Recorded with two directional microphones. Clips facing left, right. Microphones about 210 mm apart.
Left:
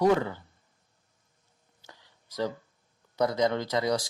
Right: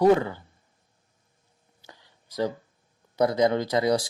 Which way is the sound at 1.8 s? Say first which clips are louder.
Right 3 dB; 25° right (ahead or behind).